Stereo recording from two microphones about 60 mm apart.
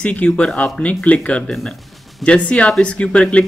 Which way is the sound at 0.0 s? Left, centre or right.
Left.